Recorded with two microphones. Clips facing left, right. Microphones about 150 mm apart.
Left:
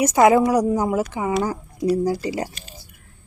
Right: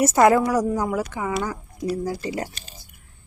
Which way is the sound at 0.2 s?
5° left (ahead or behind).